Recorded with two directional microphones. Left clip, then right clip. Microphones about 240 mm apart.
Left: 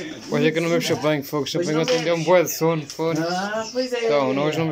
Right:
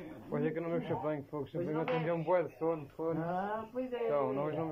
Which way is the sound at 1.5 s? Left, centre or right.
Left.